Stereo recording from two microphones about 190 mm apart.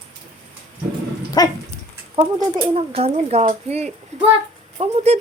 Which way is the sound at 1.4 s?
20° left (ahead or behind).